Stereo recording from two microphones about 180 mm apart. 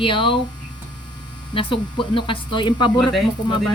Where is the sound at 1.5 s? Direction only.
30° left (ahead or behind).